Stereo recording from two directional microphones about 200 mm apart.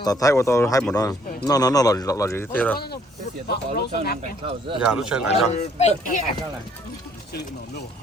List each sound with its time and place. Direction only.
0.0 s speech: 15° left (ahead or behind)
3.4 s speech: 50° left (ahead or behind)
4.2 s speech: 30° right (ahead or behind)
4.9 s speech: 5° right (ahead or behind)
5.3 s speech: 35° left (ahead or behind)